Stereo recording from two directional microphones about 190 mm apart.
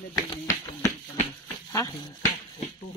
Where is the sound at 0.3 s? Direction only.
15° left (ahead or behind).